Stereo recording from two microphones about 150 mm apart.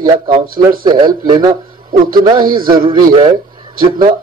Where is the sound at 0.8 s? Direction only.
30° right (ahead or behind).